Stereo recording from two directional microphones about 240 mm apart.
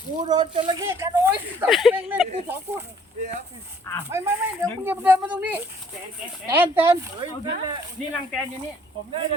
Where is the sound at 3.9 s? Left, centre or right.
Centre.